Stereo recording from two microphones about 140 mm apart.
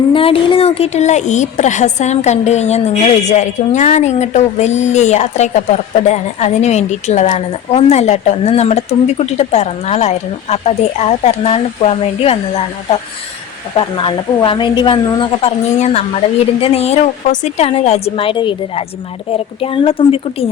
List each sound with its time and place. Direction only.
0.1 s a woman's voice: 40° left (ahead or behind)